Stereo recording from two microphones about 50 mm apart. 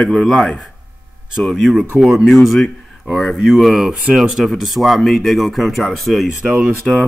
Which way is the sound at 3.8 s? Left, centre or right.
Centre.